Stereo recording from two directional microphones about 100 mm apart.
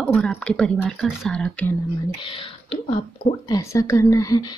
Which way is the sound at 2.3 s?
60° left (ahead or behind).